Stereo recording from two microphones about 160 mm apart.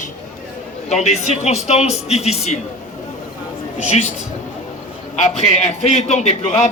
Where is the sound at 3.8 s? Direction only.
45° left (ahead or behind).